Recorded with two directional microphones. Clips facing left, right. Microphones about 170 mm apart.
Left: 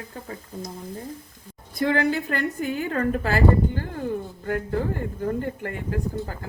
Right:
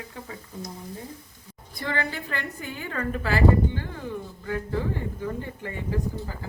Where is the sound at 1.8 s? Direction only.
60° left (ahead or behind).